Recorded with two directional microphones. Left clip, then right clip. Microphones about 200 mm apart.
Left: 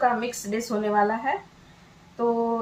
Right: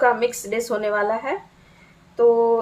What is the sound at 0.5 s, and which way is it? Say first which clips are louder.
Speech: left 2 dB; 45° right (ahead or behind).